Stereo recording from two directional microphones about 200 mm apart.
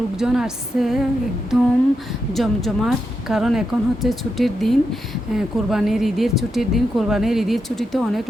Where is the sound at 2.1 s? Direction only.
Centre (ahead or behind).